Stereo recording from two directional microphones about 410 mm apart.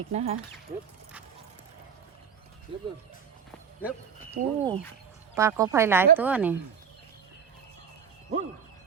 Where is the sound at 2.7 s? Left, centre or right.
Centre.